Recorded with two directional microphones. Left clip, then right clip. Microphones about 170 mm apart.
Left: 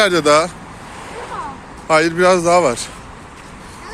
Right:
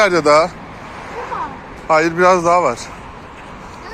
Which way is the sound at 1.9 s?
50° left (ahead or behind).